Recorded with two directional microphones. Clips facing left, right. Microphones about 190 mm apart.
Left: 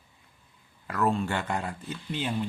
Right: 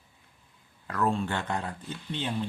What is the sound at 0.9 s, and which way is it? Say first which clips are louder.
Speech: left 1 dB; 10° left (ahead or behind).